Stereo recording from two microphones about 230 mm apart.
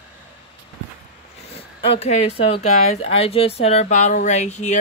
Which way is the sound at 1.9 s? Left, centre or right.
Left.